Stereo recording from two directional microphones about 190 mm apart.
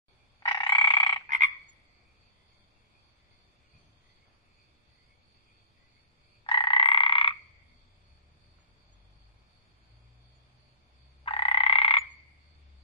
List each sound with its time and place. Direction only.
0.5 s frog: 25° left (ahead or behind)
6.4 s croak: 25° left (ahead or behind)
11.2 s frog: 30° left (ahead or behind)